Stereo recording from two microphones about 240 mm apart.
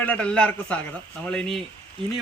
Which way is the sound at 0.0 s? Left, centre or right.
Centre.